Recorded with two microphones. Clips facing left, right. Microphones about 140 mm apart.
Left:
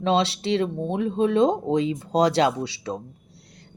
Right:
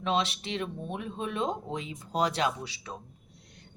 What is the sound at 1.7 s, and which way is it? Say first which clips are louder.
Speech: left 12 dB; 90° left.